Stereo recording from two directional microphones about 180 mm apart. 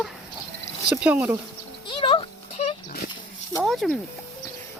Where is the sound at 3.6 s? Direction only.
Centre (ahead or behind).